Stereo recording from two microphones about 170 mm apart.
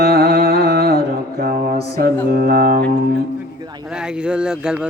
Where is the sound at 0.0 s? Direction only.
60° right (ahead or behind).